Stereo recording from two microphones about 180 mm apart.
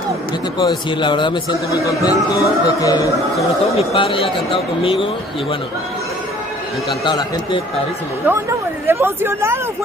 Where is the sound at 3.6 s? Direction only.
30° left (ahead or behind).